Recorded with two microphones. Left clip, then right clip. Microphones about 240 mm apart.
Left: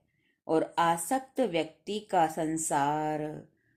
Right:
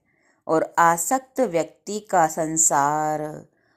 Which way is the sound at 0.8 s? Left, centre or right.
Centre.